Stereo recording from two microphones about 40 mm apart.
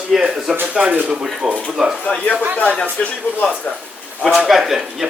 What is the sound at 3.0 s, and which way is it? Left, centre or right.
Speech, left.